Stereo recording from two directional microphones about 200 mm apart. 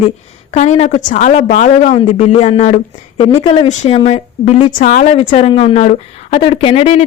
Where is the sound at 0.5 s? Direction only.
35° left (ahead or behind).